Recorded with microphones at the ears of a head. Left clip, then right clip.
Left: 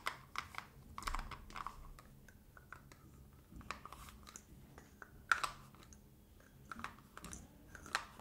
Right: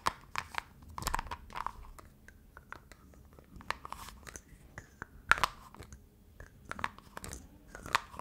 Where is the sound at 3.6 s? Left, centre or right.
Right.